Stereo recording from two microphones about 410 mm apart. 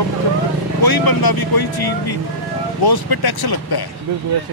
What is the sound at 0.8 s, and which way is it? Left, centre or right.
Speech, left.